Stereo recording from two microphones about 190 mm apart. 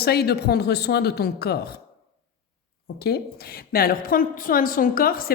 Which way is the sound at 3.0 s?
55° left (ahead or behind).